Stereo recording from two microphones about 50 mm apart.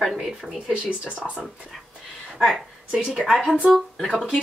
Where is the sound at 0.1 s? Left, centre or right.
Centre.